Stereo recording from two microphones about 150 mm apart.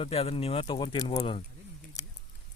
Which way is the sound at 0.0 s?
40° left (ahead or behind).